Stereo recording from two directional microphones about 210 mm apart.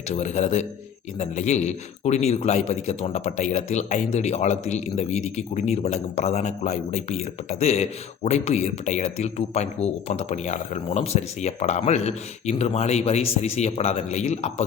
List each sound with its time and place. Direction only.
0.1 s speech: 35° left (ahead or behind)